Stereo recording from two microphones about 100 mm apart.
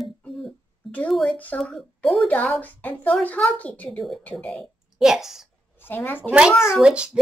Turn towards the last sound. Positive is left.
turn(degrees=-10)  # may be behind; listen again after turning